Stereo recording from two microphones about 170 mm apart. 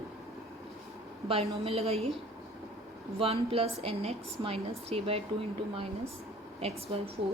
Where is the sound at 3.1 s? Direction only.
35° right (ahead or behind).